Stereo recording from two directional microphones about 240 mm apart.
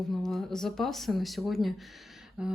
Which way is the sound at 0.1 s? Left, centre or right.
Centre.